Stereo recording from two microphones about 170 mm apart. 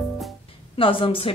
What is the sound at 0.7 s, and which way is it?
Speech, 30° left (ahead or behind).